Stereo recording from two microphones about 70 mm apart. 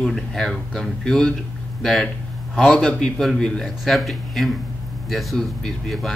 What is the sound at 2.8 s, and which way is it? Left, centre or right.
A man's voice, centre.